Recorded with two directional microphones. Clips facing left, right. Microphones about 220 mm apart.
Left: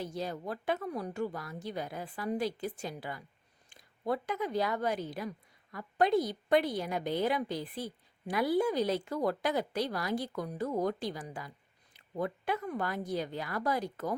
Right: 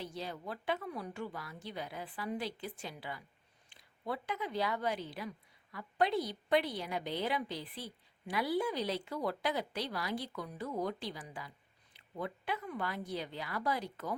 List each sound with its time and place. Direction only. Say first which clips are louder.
0.0 s a woman's voice: left 5 dB; 45° left (ahead or behind)